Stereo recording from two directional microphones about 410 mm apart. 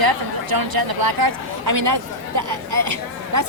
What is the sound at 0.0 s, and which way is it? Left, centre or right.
A woman's voice, right.